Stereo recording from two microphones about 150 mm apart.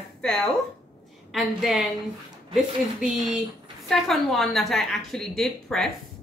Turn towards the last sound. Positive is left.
turn(degrees=0)  # may be behind; listen again after turning